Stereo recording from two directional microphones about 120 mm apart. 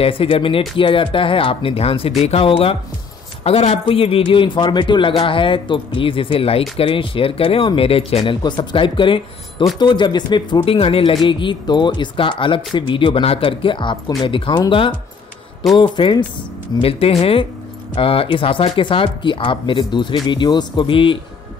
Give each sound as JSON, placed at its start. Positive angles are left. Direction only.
{"t": 0.0, "sound": "speech", "side_deg": 50}
{"t": 8.3, "sound": "speech", "side_deg": 40}
{"t": 16.7, "sound": "speech", "side_deg": 55}